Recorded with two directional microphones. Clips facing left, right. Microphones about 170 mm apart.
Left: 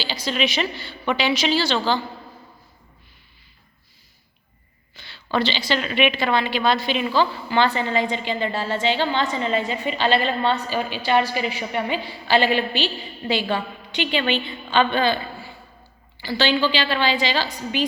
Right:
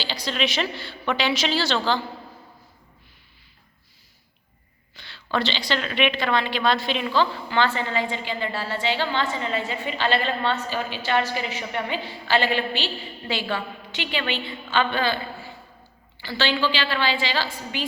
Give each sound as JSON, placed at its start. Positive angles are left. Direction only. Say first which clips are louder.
{"t": 0.0, "sound": "a woman's voice", "louder": "left 2 dB", "side_deg": 5}
{"t": 4.9, "sound": "a woman's voice", "louder": "left 3 dB", "side_deg": 5}
{"t": 16.2, "sound": "a woman's voice", "louder": "left 3 dB", "side_deg": 15}